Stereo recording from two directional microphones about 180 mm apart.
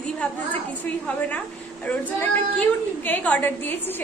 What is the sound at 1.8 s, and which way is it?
A woman's voice, 10° left (ahead or behind).